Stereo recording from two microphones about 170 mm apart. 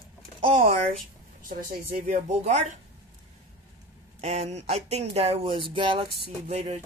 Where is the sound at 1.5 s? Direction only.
55° right (ahead or behind).